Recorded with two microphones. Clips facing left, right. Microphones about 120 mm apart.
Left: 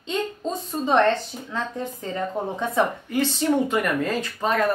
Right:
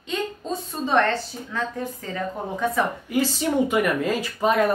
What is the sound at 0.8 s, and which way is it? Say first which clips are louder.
Speech: left 2 dB; 20° left (ahead or behind).